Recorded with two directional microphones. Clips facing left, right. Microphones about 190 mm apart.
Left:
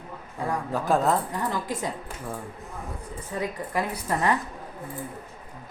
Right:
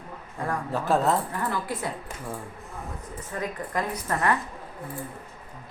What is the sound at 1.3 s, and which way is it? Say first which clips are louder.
Speech: left 1 dB; 15° left (ahead or behind).